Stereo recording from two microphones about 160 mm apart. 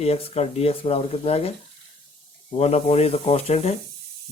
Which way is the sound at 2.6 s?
40° left (ahead or behind).